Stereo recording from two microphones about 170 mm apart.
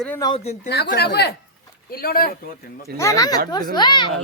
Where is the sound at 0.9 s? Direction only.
70° left (ahead or behind).